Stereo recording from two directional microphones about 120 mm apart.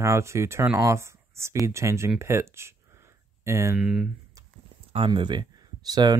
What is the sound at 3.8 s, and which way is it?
Speech, 5° right (ahead or behind).